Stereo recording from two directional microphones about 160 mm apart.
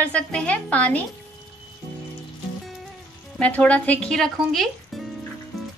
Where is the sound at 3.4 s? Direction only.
10° left (ahead or behind).